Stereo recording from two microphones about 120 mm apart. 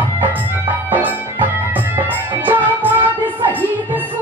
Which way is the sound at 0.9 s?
15° right (ahead or behind).